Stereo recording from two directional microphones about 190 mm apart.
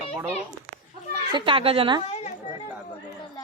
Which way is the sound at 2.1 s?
35° left (ahead or behind).